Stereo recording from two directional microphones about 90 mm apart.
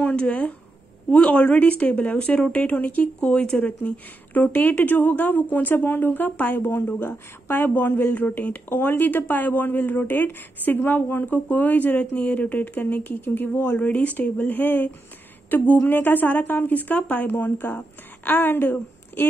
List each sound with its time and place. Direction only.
0.0 s speech: 15° left (ahead or behind)